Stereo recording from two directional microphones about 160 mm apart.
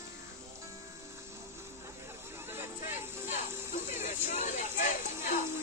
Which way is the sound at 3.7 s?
50° left (ahead or behind).